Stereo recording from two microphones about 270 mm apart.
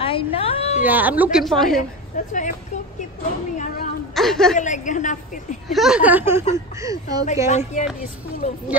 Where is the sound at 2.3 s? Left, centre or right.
Left.